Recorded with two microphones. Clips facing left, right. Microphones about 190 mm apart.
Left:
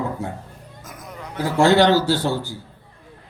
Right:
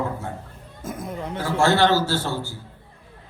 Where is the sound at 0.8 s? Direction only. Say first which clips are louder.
Right 7 dB; 30° right (ahead or behind).